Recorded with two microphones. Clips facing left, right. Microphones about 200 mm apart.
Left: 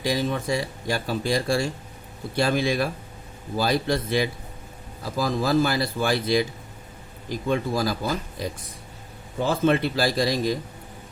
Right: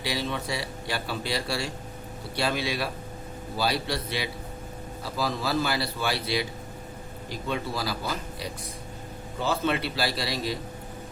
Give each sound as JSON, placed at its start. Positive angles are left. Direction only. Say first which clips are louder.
{"t": 0.0, "sound": "speech", "louder": "left 5 dB", "side_deg": 45}